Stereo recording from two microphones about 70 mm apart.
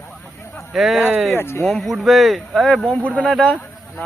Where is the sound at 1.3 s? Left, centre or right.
Left.